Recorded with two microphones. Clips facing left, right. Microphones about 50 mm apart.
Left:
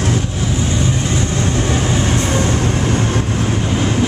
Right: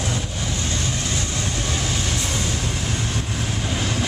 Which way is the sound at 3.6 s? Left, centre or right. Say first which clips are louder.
Left 5 dB; left.